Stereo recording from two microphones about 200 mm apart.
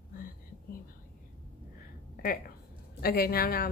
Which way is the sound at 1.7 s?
45° left (ahead or behind).